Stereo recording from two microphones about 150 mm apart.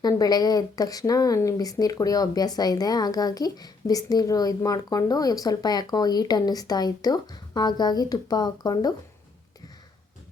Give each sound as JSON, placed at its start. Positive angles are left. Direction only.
{"t": 0.0, "sound": "speech", "side_deg": 25}